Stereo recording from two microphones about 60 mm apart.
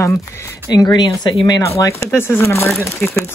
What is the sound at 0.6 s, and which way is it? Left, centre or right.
Speech, left.